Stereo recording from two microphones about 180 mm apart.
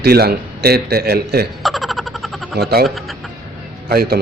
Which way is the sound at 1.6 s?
Centre (ahead or behind).